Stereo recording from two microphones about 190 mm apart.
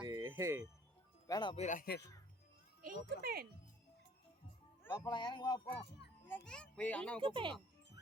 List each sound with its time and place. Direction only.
0.0 s music: 20° right (ahead or behind)
1.3 s speech: 25° left (ahead or behind)
1.6 s speech: 45° left (ahead or behind)
2.8 s a child's voice: 55° right (ahead or behind)
5.0 s speech: 25° left (ahead or behind)
6.2 s a child's voice: 5° left (ahead or behind)
7.2 s speech: 25° right (ahead or behind)